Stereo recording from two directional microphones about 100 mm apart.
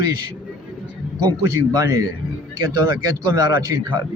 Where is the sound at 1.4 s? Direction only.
35° right (ahead or behind).